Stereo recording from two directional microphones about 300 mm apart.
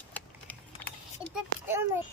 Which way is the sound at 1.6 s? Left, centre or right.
Centre.